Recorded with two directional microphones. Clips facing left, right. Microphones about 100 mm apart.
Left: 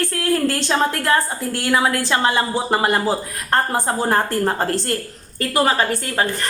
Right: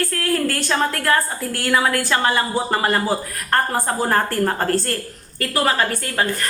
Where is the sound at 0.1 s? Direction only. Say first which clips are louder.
Left 2 dB; 20° left (ahead or behind).